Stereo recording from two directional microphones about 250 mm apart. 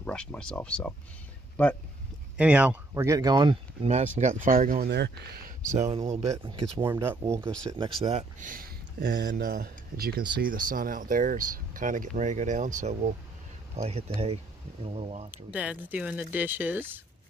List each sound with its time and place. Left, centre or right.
0.0 s speech: centre
2.3 s speech: centre; by 5.5 s right
5.8 s speech: right
6.8 s speech: centre
7.7 s speech: right
15.3 s speech: centre